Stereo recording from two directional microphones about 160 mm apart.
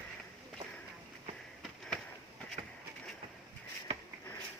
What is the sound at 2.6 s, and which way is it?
Bird, 40° right (ahead or behind).